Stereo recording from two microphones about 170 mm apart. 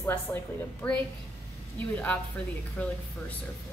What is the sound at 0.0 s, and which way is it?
Speech, 15° left (ahead or behind).